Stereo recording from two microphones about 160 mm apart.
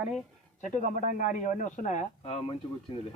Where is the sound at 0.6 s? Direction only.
50° left (ahead or behind).